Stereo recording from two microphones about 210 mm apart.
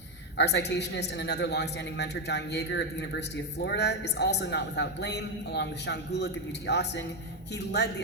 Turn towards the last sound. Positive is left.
turn(degrees=55)  # may be behind; listen again after turning